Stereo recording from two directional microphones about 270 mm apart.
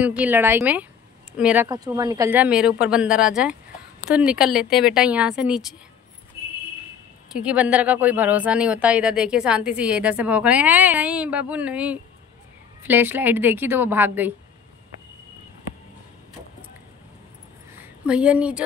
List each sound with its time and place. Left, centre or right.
0.0 s speech: centre
7.3 s a woman's voice: centre
17.7 s a sound: centre